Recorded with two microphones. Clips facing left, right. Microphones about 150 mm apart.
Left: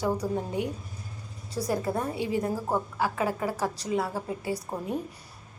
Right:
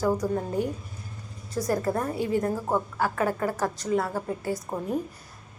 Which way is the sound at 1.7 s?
5° left (ahead or behind).